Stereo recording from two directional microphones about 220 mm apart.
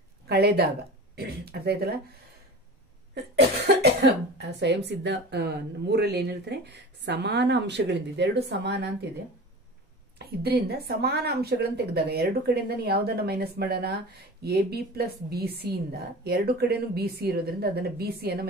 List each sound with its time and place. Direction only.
0.3 s speech: 45° right (ahead or behind)
3.3 s speech: 50° right (ahead or behind)
10.1 s speech: 45° right (ahead or behind)